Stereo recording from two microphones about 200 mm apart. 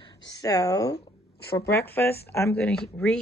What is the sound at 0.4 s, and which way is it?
Speech, 20° left (ahead or behind).